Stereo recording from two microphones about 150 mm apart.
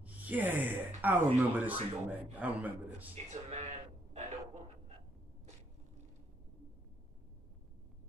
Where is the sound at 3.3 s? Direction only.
50° right (ahead or behind).